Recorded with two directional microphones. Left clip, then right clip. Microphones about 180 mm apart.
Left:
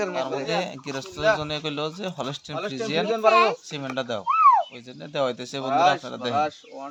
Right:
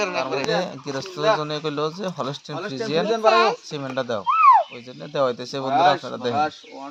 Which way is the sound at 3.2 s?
40° right (ahead or behind).